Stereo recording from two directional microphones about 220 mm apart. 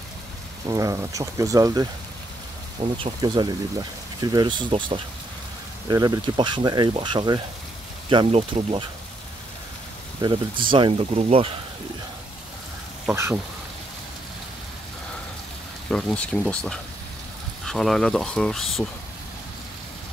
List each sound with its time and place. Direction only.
0.7 s speech: 15° right (ahead or behind)
3.0 s speech: 20° right (ahead or behind)
10.2 s speech: 20° right (ahead or behind)
13.0 s speech: 10° right (ahead or behind)
15.9 s speech: 5° left (ahead or behind)